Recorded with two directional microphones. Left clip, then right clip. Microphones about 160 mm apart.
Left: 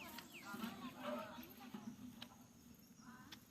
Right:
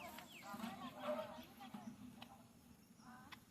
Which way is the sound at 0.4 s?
35° right (ahead or behind).